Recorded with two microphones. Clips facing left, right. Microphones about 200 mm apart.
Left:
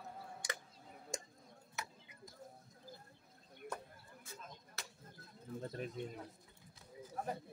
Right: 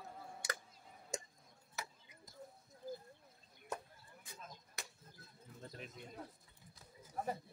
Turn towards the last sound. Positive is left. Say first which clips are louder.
# left 8 dB
turn(degrees=45)  # may be behind; listen again after turning